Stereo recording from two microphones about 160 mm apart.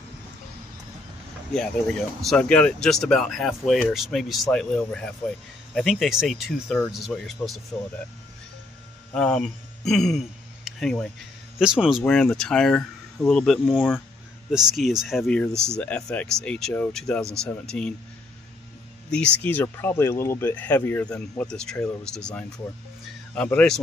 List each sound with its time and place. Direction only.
1.5 s speech: 5° left (ahead or behind)
9.1 s speech: 5° left (ahead or behind)
15.5 s speech: 15° right (ahead or behind)
15.8 s speech: 10° left (ahead or behind)
19.0 s speech: 5° left (ahead or behind)